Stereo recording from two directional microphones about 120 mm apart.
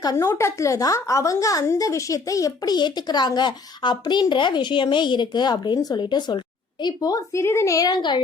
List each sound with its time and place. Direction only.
0.0 s a woman's voice: 30° left (ahead or behind)